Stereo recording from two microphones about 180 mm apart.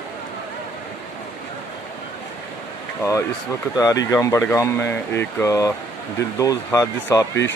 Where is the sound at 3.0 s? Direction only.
15° left (ahead or behind).